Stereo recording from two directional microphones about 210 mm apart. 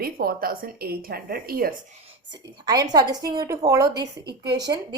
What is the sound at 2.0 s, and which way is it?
A woman's voice, 20° right (ahead or behind).